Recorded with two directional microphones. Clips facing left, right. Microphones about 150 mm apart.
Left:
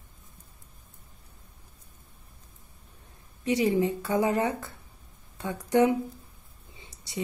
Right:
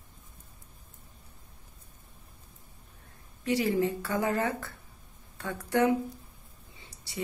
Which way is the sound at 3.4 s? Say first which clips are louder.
Left 2 dB; 20° left (ahead or behind).